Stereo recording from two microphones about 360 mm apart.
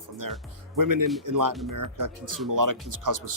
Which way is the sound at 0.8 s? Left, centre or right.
Right.